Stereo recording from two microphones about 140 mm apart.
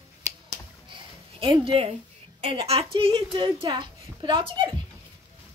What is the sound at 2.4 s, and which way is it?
A woman's voice, 45° right (ahead or behind).